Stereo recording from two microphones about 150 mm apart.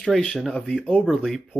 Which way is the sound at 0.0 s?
Centre (ahead or behind).